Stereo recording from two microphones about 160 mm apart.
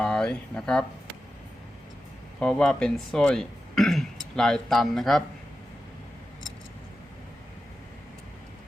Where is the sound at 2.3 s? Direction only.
5° left (ahead or behind).